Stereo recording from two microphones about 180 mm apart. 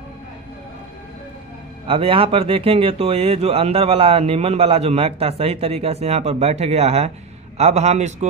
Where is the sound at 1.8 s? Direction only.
30° right (ahead or behind).